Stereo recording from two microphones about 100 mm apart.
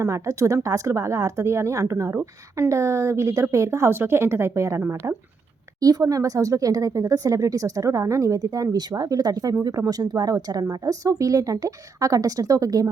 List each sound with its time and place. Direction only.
0.0 s speech: 30° right (ahead or behind)